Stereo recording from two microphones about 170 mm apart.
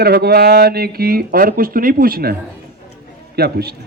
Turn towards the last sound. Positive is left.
turn(degrees=-70)  # may be behind; listen again after turning